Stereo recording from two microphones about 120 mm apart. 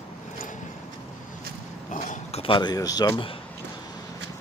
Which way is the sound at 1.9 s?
90° left.